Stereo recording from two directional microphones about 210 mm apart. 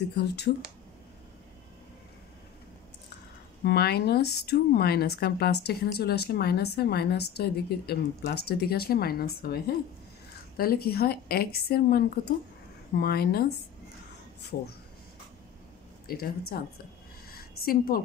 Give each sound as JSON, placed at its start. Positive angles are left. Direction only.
{"t": 0.1, "sound": "speech", "side_deg": 50}
{"t": 3.6, "sound": "speech", "side_deg": 50}
{"t": 16.1, "sound": "speech", "side_deg": 45}
{"t": 17.3, "sound": "a sound", "side_deg": 45}